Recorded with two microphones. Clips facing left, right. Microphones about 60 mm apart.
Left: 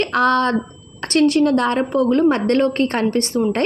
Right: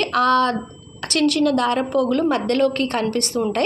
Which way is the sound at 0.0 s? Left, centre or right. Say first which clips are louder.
Left 1 dB; left.